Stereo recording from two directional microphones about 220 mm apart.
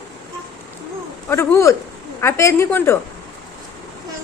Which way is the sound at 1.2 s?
10° left (ahead or behind).